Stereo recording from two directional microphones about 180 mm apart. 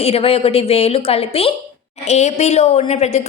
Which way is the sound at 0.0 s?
35° left (ahead or behind).